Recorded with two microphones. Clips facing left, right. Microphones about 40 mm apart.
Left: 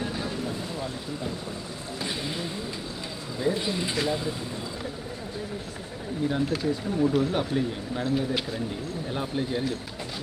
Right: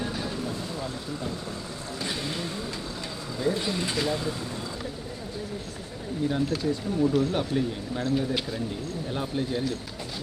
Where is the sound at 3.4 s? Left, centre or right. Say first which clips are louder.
Even; centre.